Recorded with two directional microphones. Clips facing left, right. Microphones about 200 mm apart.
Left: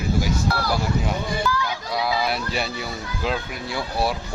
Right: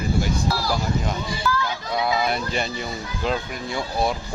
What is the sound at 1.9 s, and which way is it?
Speech, centre (ahead or behind).